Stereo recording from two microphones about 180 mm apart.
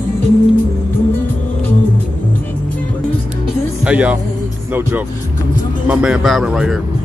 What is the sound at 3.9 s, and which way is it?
Speech, 5° right (ahead or behind).